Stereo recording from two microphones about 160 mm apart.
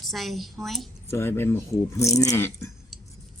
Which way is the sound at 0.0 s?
Centre (ahead or behind).